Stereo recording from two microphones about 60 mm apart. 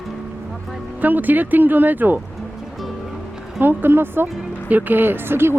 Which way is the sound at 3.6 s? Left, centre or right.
Right.